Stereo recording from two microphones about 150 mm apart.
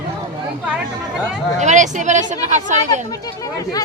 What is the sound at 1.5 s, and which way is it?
Speech, 55° right (ahead or behind).